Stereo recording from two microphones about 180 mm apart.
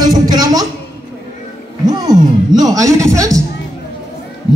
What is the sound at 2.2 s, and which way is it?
A man's voice, 20° right (ahead or behind).